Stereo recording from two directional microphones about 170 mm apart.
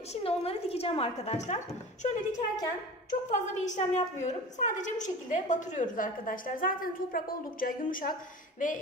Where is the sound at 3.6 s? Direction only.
45° left (ahead or behind).